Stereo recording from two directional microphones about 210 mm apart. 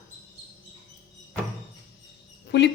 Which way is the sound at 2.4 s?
55° left (ahead or behind).